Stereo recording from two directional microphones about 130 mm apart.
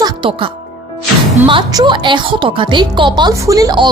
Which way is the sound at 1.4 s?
40° right (ahead or behind).